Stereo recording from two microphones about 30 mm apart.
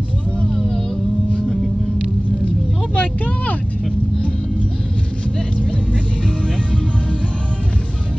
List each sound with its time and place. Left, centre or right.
3.0 s vehicle: left